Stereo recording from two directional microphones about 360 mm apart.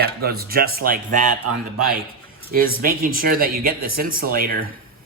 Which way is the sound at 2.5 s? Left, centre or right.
Right.